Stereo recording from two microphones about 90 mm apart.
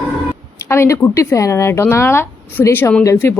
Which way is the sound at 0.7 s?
30° left (ahead or behind).